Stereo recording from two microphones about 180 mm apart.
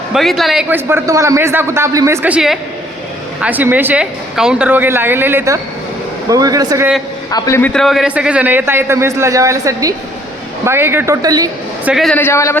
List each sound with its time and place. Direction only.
0.1 s a man's voice: centre (ahead or behind); by 6.8 s 20° right (ahead or behind)
7.3 s a man's voice: 20° left (ahead or behind)
7.7 s a man's voice: centre (ahead or behind); by 11.4 s 20° right (ahead or behind)
11.9 s a woman's voice: centre (ahead or behind)
12.1 s a man's voice: 15° left (ahead or behind)